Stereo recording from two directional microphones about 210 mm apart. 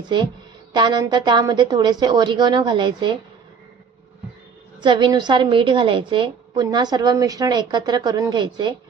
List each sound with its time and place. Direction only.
0.0 s a woman's voice: 20° right (ahead or behind)
4.8 s a woman's voice: 20° right (ahead or behind)